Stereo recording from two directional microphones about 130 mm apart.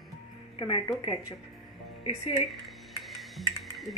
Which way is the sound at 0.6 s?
40° left (ahead or behind).